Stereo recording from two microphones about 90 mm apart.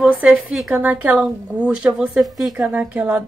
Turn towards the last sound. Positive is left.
turn(degrees=-15)  # may be behind; listen again after turning